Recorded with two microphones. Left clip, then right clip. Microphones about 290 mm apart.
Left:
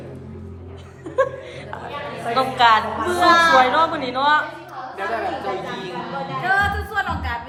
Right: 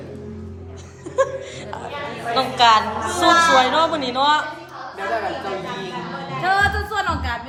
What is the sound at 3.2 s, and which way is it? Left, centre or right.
Speech, left.